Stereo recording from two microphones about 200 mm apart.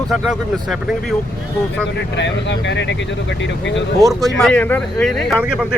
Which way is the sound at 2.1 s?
65° left (ahead or behind).